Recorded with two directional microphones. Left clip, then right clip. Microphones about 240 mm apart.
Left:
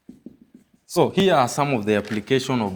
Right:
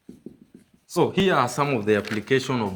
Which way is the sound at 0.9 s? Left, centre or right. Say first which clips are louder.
Left 3 dB; left.